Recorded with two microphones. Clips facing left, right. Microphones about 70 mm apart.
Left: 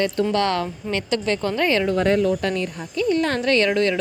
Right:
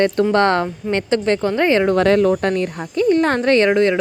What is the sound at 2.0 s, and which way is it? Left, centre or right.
Speech, right.